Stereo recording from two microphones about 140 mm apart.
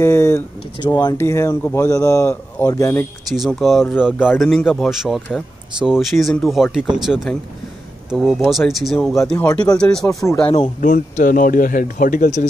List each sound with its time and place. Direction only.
0.0 s speech: 20° left (ahead or behind)
0.7 s speech: 30° left (ahead or behind)
3.3 s speech: centre (ahead or behind)
10.4 s speech: 35° left (ahead or behind)
10.8 s speech: 70° left (ahead or behind)